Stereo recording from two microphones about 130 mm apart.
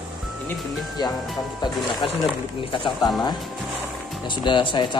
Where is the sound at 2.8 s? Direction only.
35° left (ahead or behind).